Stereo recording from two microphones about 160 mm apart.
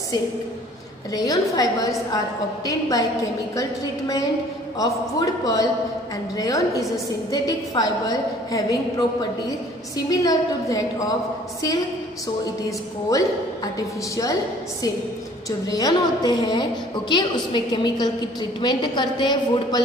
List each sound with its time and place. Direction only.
1.1 s a woman's voice: 20° left (ahead or behind)
4.7 s a woman's voice: 20° left (ahead or behind)
13.7 s a woman's voice: 20° left (ahead or behind)
15.6 s a woman's voice: 25° left (ahead or behind)